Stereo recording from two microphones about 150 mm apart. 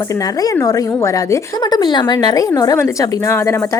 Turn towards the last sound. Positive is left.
turn(degrees=20)  # may be behind; listen again after turning